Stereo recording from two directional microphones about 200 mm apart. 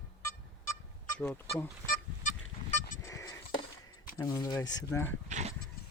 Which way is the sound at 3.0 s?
15° left (ahead or behind).